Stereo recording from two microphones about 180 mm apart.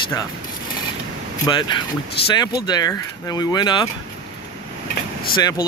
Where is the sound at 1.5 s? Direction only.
25° left (ahead or behind).